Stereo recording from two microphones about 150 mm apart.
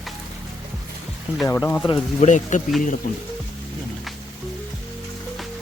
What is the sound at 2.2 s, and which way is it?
Speech, 55° left (ahead or behind).